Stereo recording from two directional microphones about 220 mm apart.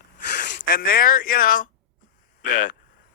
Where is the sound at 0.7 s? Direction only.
40° left (ahead or behind).